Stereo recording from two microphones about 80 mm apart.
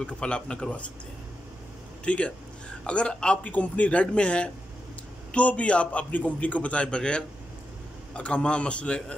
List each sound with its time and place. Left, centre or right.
0.0 s a man's voice: centre
2.0 s a man's voice: centre